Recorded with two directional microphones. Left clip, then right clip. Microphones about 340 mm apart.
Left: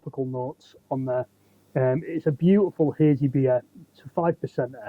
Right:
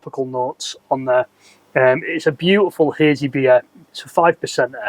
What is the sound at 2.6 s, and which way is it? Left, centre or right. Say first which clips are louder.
Speech: right 7 dB; centre.